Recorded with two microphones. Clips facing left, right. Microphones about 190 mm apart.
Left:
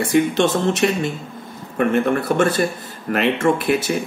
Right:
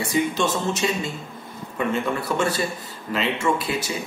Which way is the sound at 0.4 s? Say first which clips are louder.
Left 6 dB; 65° left (ahead or behind).